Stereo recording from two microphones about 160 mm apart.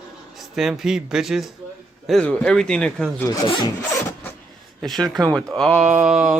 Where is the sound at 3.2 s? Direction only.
25° left (ahead or behind).